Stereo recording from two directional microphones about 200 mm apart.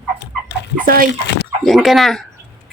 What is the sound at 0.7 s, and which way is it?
Bathtub, 45° right (ahead or behind).